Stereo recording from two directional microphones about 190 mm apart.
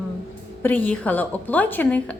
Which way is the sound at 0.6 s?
10° left (ahead or behind).